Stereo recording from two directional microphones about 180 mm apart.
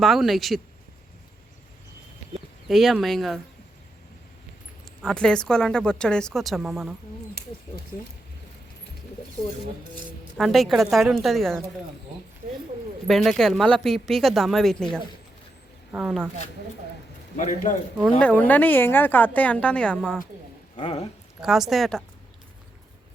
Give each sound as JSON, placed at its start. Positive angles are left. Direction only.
{"t": 0.0, "sound": "speech", "side_deg": 0}
{"t": 2.6, "sound": "speech", "side_deg": 0}
{"t": 5.0, "sound": "speech", "side_deg": 5}
{"t": 10.3, "sound": "speech", "side_deg": 0}
{"t": 13.1, "sound": "speech", "side_deg": 0}
{"t": 17.3, "sound": "a man's voice", "side_deg": 45}
{"t": 18.2, "sound": "a woman's voice", "side_deg": 10}
{"t": 20.7, "sound": "speech", "side_deg": 30}
{"t": 21.4, "sound": "speech", "side_deg": 0}